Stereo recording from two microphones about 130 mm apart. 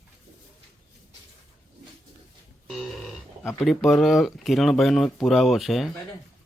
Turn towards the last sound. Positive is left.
turn(degrees=0)  # may be behind; listen again after turning